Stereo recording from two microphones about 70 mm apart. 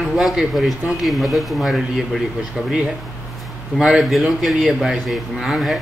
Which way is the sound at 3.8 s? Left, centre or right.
Centre.